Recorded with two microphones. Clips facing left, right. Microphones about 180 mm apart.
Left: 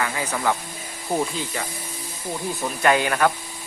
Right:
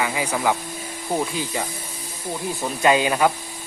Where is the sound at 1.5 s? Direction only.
15° right (ahead or behind).